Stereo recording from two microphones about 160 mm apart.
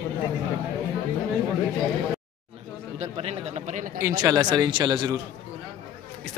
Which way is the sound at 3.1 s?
40° right (ahead or behind).